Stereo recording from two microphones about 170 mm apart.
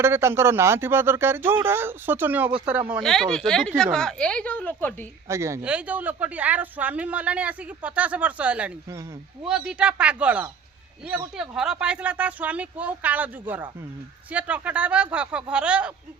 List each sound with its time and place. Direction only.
0.0 s speech: 15° right (ahead or behind)
3.0 s speech: centre (ahead or behind)
5.3 s speech: 15° right (ahead or behind)